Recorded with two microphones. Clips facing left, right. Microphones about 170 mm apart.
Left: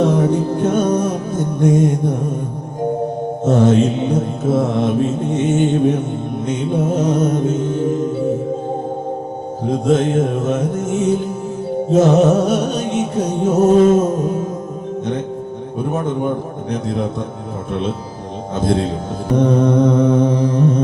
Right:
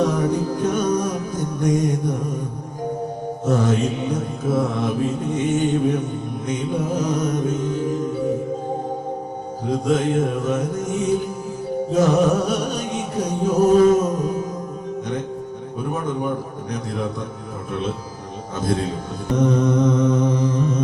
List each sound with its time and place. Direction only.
0.0 s mantra: 25° left (ahead or behind)
0.9 s music: 25° left (ahead or behind)
3.4 s mantra: 25° left (ahead or behind)
7.2 s music: 25° left (ahead or behind)
9.6 s mantra: 25° left (ahead or behind)
11.9 s music: 25° left (ahead or behind)
15.9 s mantra: 25° left (ahead or behind)
18.6 s mantra: 25° left (ahead or behind)
19.4 s mantra: 55° left (ahead or behind)